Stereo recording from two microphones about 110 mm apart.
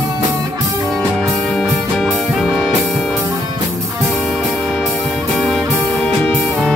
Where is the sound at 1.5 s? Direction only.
5° left (ahead or behind).